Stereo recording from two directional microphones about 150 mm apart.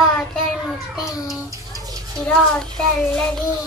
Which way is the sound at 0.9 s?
5° right (ahead or behind).